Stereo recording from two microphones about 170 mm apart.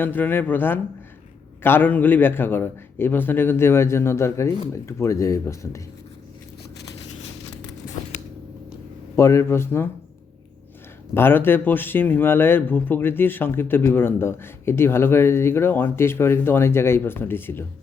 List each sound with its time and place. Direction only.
0.0 s speech: 10° left (ahead or behind)
9.1 s speech: 15° left (ahead or behind)
11.1 s speech: 15° left (ahead or behind)